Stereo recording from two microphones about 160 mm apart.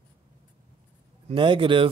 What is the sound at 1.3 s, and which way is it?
Speech, 30° right (ahead or behind).